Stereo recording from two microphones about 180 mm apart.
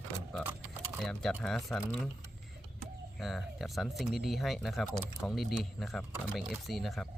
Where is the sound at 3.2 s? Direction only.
Centre (ahead or behind).